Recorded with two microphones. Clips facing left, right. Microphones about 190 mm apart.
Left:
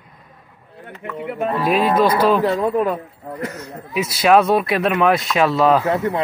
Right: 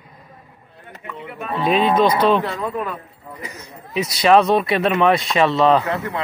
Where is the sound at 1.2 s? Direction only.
70° left (ahead or behind).